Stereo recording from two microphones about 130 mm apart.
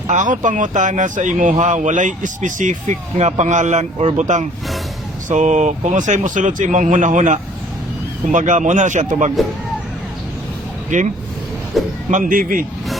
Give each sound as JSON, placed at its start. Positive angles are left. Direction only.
{"t": 0.1, "sound": "speech", "side_deg": -75}
{"t": 10.8, "sound": "speech", "side_deg": -75}
{"t": 11.7, "sound": "speech", "side_deg": 0}
{"t": 12.1, "sound": "a man's voice", "side_deg": -90}